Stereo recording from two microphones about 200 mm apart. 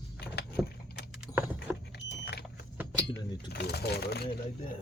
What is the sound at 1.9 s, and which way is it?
Vehicle, 55° left (ahead or behind).